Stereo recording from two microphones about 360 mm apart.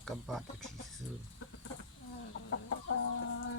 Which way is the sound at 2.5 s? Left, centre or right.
Left.